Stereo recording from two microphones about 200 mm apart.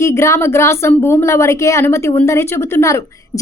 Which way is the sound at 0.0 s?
15° left (ahead or behind).